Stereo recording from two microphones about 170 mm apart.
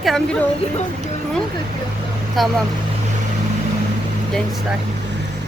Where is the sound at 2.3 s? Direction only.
Centre (ahead or behind).